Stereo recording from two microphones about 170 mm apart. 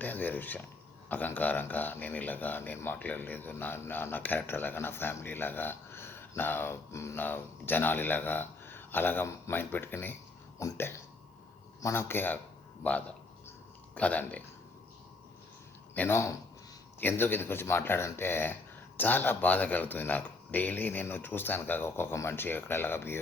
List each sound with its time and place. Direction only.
0.0 s speech: 10° left (ahead or behind)
16.0 s speech: 15° left (ahead or behind)